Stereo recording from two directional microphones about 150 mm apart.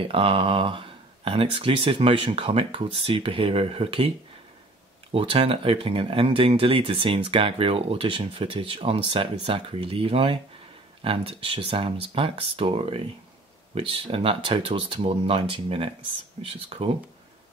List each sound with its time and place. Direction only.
0.0 s speech: 35° right (ahead or behind)
5.1 s speech: 40° right (ahead or behind)